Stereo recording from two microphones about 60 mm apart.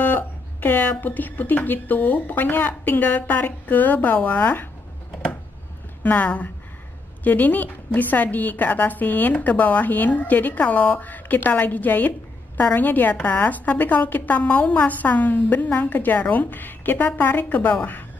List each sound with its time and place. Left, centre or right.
0.0 s a woman's voice: left
6.0 s a woman's voice: left